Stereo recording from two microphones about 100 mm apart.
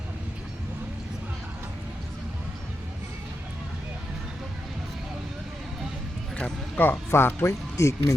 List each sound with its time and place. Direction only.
6.7 s speech: 20° left (ahead or behind)